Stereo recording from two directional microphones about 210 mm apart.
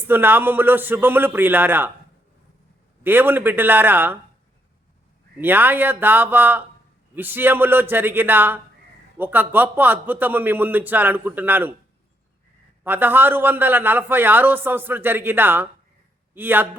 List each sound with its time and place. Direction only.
0.1 s a man's voice: 10° right (ahead or behind)
3.0 s a man's voice: 10° right (ahead or behind)
5.4 s a man's voice: 10° right (ahead or behind)
12.8 s a man's voice: 10° right (ahead or behind)